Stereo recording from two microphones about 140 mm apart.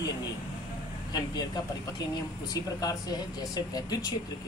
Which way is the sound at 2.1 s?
25° left (ahead or behind).